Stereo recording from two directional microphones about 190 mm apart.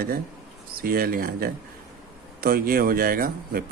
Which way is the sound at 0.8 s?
50° right (ahead or behind).